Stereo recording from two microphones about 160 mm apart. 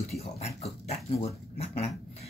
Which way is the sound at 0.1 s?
40° left (ahead or behind).